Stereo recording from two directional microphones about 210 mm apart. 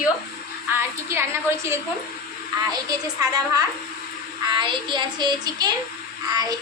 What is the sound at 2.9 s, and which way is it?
Speech, 15° right (ahead or behind).